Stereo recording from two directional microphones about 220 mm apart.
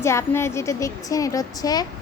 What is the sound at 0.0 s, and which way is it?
A woman's voice, 10° left (ahead or behind).